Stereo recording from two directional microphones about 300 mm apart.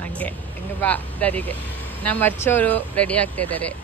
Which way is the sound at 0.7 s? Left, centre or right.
Centre.